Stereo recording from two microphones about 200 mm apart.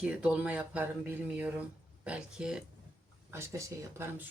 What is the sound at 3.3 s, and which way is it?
Speech, 15° right (ahead or behind).